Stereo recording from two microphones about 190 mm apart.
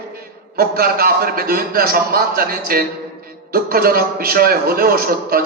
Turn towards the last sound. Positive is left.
turn(degrees=-50)  # may be behind; listen again after turning